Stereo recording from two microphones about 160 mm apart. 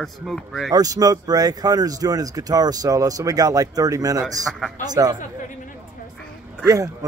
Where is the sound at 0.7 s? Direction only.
25° right (ahead or behind).